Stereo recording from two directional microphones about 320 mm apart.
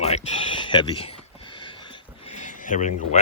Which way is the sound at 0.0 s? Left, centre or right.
Centre.